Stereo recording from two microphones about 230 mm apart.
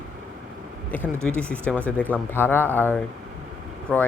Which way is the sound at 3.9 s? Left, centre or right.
Centre.